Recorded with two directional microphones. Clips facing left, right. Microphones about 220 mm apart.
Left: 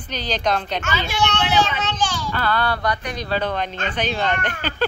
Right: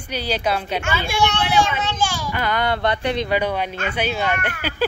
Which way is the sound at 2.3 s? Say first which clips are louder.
Even; 15° right (ahead or behind).